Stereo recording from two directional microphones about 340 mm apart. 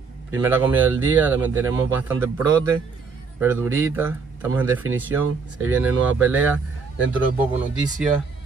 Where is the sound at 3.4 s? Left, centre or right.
Centre.